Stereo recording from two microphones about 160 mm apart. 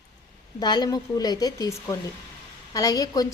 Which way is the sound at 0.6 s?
25° left (ahead or behind).